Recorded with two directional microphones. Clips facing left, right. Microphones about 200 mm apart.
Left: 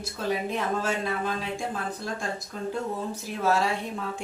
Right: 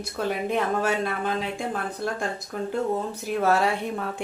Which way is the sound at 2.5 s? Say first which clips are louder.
Right 6 dB; 60° right (ahead or behind).